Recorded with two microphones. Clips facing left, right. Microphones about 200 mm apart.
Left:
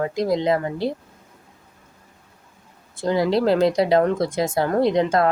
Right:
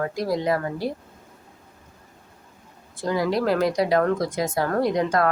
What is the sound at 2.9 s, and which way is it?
Speech, 25° left (ahead or behind).